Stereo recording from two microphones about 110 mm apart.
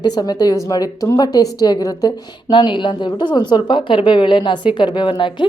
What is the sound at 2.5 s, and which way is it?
A woman's voice, 45° left (ahead or behind).